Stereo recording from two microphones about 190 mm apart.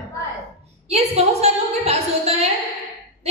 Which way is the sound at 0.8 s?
35° right (ahead or behind).